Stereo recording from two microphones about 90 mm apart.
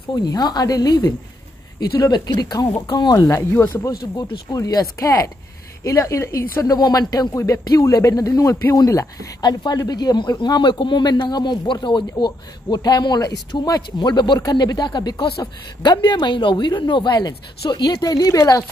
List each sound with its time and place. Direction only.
0.1 s speech: 45° left (ahead or behind)
3.3 s speech: 35° left (ahead or behind)
4.3 s speech: 45° left (ahead or behind)
9.4 s speech: 55° left (ahead or behind)